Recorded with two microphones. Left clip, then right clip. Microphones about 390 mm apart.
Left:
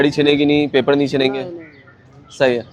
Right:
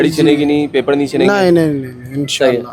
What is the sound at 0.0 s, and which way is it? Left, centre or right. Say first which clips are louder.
Speech: right 3 dB; centre.